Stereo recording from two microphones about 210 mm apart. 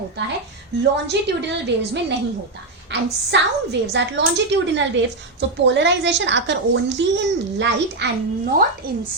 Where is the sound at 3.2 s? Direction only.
55° right (ahead or behind).